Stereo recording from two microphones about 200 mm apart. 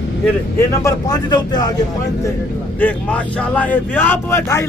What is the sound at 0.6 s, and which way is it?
Speech, 15° left (ahead or behind).